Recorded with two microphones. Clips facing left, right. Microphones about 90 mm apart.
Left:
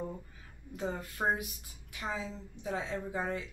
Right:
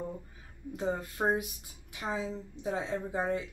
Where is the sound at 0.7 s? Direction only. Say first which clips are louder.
Right 3 dB; 20° right (ahead or behind).